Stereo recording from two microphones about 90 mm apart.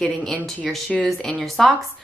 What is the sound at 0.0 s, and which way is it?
Speech, 10° left (ahead or behind).